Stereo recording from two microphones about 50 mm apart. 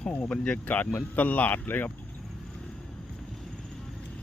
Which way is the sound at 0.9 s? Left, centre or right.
Left.